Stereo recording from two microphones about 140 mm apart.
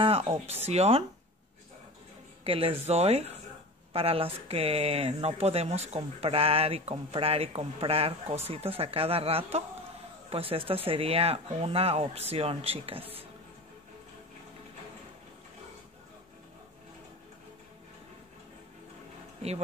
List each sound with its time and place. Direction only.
0.0 s speech: 45° right (ahead or behind)
2.4 s speech: 40° right (ahead or behind)